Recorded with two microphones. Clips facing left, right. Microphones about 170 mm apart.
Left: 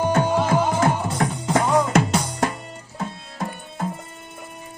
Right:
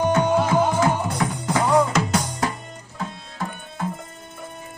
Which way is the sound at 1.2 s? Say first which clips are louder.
Left 3 dB; 55° left (ahead or behind).